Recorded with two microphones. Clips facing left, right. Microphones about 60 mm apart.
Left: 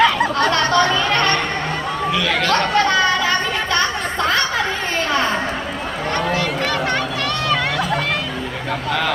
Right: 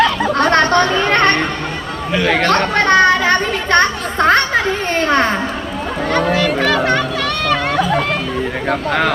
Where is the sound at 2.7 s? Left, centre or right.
Right.